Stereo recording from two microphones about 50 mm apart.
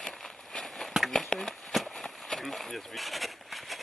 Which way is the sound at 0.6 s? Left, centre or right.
Centre.